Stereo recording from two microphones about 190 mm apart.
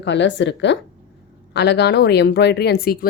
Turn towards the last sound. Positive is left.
turn(degrees=50)  # may be behind; listen again after turning